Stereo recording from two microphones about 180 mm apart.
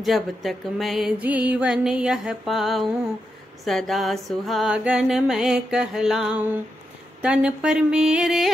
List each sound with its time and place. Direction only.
0.0 s music: centre (ahead or behind)